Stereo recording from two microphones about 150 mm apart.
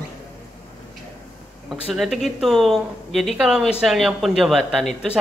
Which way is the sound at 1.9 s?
Centre (ahead or behind).